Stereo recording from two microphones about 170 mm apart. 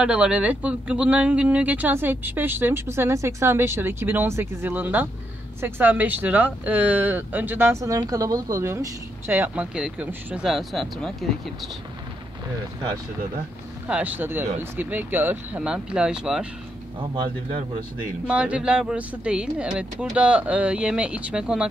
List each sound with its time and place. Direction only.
0.0 s speech: 5° right (ahead or behind)
13.8 s speech: 10° right (ahead or behind)
17.1 s speech: 30° right (ahead or behind)
18.2 s speech: 5° right (ahead or behind)